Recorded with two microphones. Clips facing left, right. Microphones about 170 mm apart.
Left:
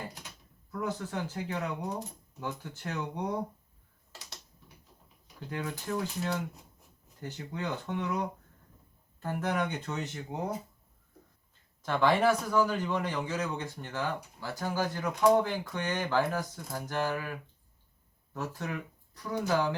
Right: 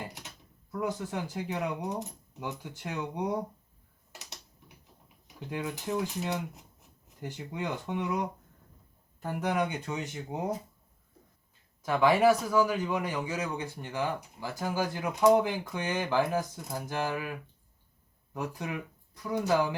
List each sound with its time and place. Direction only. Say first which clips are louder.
0.0 s a sound: right 1 dB; 20° right (ahead or behind)
0.7 s a man's voice: right 2 dB; 15° right (ahead or behind)
5.5 s a man's voice: right 2 dB; 15° right (ahead or behind)
11.8 s a man's voice: right 2 dB; 5° right (ahead or behind)
18.3 s a man's voice: right 1 dB; 15° right (ahead or behind)